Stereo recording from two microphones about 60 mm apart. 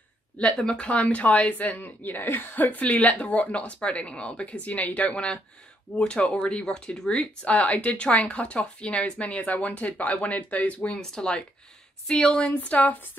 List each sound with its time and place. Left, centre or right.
0.6 s speech: centre
11.0 s speech: centre